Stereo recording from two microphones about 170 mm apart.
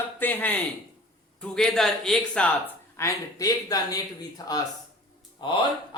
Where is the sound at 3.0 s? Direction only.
20° left (ahead or behind).